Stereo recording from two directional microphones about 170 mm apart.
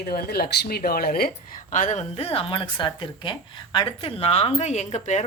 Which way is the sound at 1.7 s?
45° left (ahead or behind).